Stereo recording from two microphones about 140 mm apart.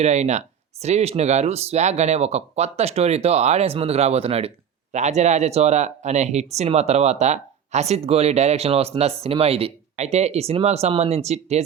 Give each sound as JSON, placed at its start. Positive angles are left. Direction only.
{"t": 0.0, "sound": "speech", "side_deg": -55}